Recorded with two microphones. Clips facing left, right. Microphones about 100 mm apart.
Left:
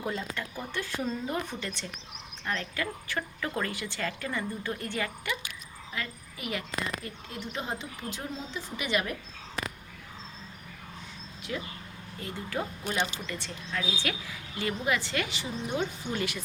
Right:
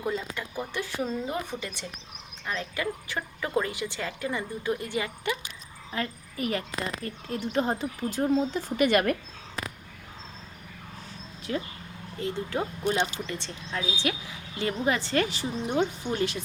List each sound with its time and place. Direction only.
0.3 s a woman's voice: 15° right (ahead or behind)
5.9 s a woman's voice: 40° right (ahead or behind)
11.5 s a woman's voice: 40° right (ahead or behind)
12.2 s speech: 25° right (ahead or behind)